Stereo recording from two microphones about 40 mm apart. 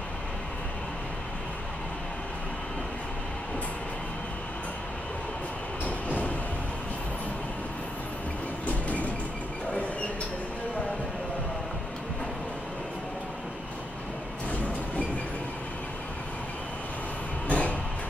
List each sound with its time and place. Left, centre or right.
5.9 s vehicle: left
8.6 s train: left
17.5 s a sound: left